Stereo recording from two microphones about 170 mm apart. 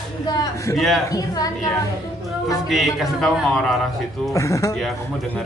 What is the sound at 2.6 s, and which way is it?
Speech, centre (ahead or behind).